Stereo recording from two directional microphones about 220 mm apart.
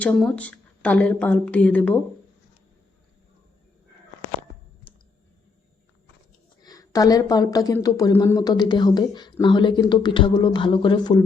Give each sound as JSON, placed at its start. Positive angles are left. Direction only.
{"t": 0.0, "sound": "speech", "side_deg": 5}
{"t": 6.6, "sound": "speech", "side_deg": 15}